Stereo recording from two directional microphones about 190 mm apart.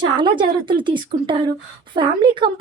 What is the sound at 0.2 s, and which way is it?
Speech, 25° right (ahead or behind).